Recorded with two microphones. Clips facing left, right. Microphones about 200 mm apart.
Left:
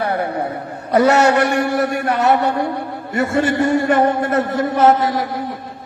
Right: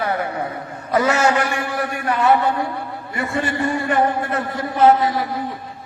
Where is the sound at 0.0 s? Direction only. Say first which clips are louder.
Left 2 dB; 60° left (ahead or behind).